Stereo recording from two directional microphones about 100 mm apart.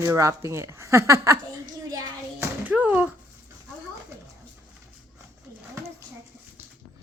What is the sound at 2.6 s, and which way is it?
Speech, 15° right (ahead or behind).